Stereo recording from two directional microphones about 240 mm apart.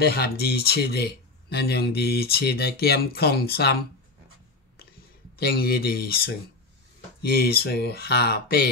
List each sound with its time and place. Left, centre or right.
0.0 s speech: left
5.4 s speech: left